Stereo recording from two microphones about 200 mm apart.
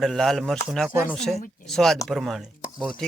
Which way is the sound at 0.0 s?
Centre (ahead or behind).